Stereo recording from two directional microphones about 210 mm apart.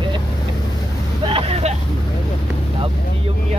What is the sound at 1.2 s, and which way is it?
Speech, 25° right (ahead or behind).